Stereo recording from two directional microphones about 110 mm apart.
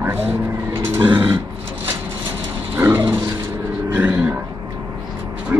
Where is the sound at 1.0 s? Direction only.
45° right (ahead or behind).